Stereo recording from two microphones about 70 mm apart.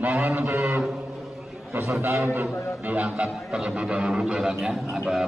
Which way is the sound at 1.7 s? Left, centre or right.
Right.